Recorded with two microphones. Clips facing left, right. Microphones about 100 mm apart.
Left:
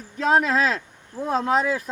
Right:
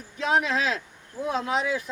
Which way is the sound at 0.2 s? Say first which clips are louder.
Left 5 dB; 45° left (ahead or behind).